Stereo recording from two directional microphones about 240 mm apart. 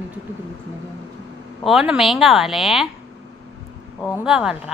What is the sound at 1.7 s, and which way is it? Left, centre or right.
Speech, centre.